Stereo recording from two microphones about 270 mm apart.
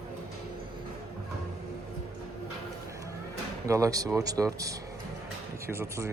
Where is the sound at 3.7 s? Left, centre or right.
Centre.